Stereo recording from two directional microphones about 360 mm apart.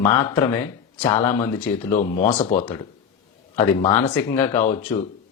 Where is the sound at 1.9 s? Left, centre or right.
Left.